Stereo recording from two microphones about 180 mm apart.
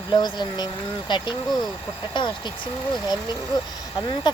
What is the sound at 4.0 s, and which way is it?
Speech, 25° left (ahead or behind).